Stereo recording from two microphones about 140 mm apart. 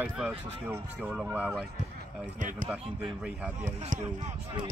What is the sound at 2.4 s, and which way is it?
Speech, 65° right (ahead or behind).